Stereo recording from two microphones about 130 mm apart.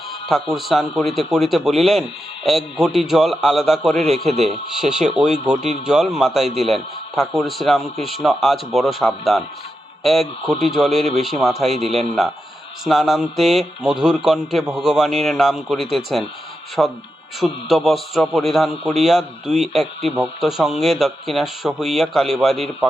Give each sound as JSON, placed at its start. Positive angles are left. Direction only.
{"t": 0.5, "sound": "speech", "side_deg": 0}
{"t": 4.3, "sound": "speech", "side_deg": -55}
{"t": 4.8, "sound": "speech", "side_deg": -5}